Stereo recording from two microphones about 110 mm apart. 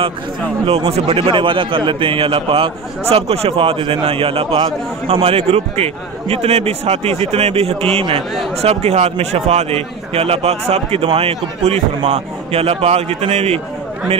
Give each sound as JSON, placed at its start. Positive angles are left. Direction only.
{"t": 0.7, "sound": "a man's voice", "side_deg": -60}
{"t": 8.5, "sound": "a man's voice", "side_deg": -75}